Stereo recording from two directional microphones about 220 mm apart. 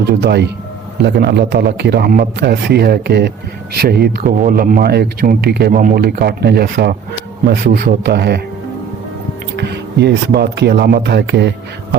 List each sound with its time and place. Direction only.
0.1 s a man's voice: 50° right (ahead or behind)
9.6 s a man's voice: 50° right (ahead or behind)